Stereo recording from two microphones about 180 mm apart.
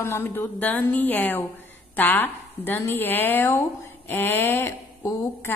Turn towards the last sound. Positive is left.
turn(degrees=15)  # may be behind; listen again after turning